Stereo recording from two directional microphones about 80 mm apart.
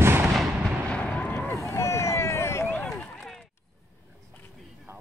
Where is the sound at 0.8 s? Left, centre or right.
Centre.